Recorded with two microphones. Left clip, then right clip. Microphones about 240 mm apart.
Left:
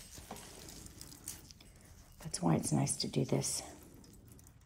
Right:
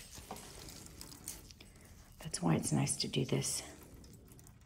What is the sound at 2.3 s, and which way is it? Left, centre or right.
Speech, centre.